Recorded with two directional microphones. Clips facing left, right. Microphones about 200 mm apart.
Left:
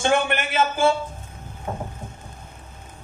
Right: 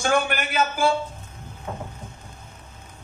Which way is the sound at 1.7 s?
40° left (ahead or behind).